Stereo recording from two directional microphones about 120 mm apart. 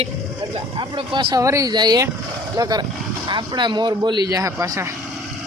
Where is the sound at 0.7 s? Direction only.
40° right (ahead or behind).